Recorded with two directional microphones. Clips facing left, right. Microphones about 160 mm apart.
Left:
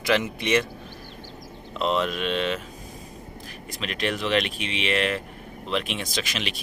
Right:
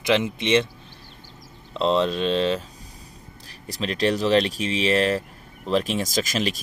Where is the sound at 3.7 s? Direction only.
35° right (ahead or behind).